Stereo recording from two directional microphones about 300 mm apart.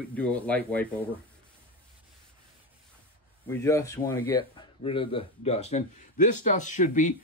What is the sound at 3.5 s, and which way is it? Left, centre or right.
A man's voice, centre.